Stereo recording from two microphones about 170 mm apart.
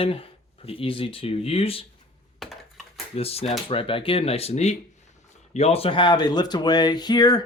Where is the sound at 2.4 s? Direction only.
Centre (ahead or behind).